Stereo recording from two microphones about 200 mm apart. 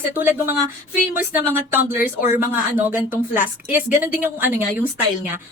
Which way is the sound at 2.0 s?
45° left (ahead or behind).